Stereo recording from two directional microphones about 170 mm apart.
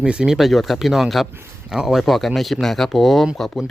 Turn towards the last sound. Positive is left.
turn(degrees=0)  # may be behind; listen again after turning